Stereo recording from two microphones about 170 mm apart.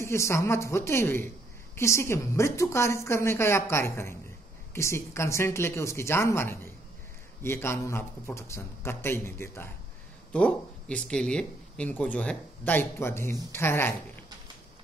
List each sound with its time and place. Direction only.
0.0 s speech: 15° left (ahead or behind)